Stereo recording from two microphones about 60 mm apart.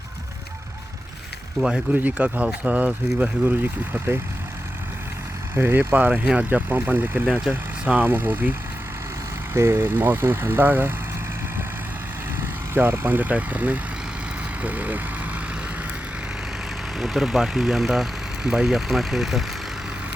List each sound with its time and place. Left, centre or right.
1.9 s speech: right
3.4 s speech: right
5.5 s speech: right
5.9 s speech: right
9.5 s speech: right
12.7 s speech: right
17.0 s speech: centre